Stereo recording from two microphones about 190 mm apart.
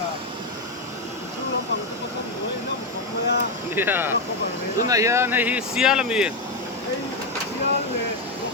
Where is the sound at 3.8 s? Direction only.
10° right (ahead or behind).